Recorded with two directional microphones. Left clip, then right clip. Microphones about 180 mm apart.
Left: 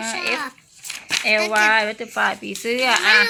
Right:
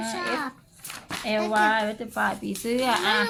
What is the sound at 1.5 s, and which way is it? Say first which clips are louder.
Speech: left 5 dB; 45° left (ahead or behind).